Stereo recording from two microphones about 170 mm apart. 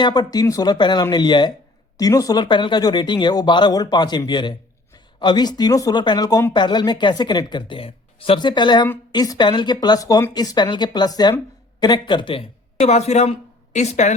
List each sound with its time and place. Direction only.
0.0 s a woman's voice: 25° left (ahead or behind); by 14.1 s 45° left (ahead or behind)